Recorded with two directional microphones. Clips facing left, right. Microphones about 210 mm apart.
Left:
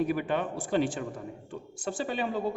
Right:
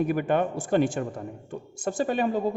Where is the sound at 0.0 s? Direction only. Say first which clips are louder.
Right 4 dB; 50° right (ahead or behind).